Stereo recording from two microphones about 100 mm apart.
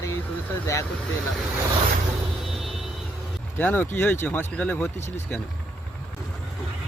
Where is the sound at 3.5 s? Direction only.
20° left (ahead or behind).